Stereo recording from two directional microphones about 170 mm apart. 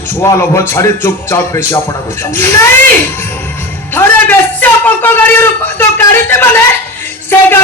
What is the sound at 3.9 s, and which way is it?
A man's voice, 10° left (ahead or behind).